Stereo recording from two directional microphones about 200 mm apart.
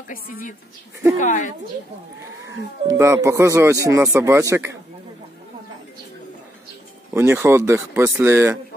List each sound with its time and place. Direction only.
0.1 s a woman's voice: 45° left (ahead or behind)
2.9 s speech: 15° right (ahead or behind)
7.2 s speech: 10° right (ahead or behind)